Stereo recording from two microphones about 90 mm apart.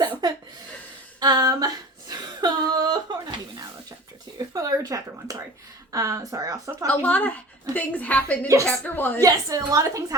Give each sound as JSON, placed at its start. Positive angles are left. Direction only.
{"t": 0.0, "sound": "a sound", "side_deg": -50}
{"t": 1.2, "sound": "female singing", "side_deg": -50}
{"t": 4.4, "sound": "a woman's voice", "side_deg": -45}
{"t": 7.0, "sound": "a woman's voice", "side_deg": 15}
{"t": 9.0, "sound": "a woman's voice", "side_deg": 20}
{"t": 9.2, "sound": "a woman's voice", "side_deg": -40}